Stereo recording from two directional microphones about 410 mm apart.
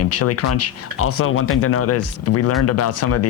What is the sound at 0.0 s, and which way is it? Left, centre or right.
Speech, left.